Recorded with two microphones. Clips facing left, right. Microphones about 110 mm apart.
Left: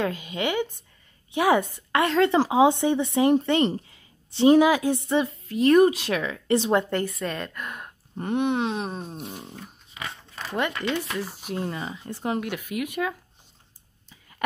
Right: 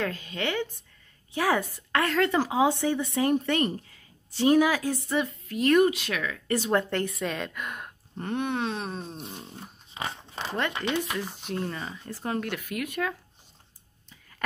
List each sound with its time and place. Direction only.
0.0 s speech: 15° left (ahead or behind)
6.9 s a woman's voice: centre (ahead or behind)
8.2 s speech: 15° left (ahead or behind)
9.6 s a sound: 25° right (ahead or behind)
10.7 s speech: 15° right (ahead or behind)
11.1 s speech: 5° left (ahead or behind)